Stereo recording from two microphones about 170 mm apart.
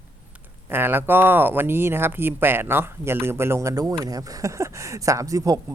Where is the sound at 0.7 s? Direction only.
10° right (ahead or behind).